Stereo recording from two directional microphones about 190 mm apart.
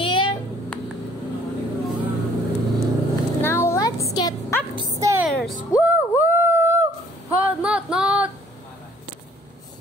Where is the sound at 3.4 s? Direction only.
15° left (ahead or behind).